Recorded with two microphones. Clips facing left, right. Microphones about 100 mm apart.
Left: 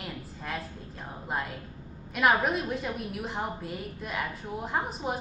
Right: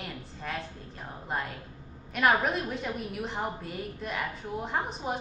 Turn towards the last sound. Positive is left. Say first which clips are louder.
# left 1 dB
turn(degrees=0)  # may be behind; listen again after turning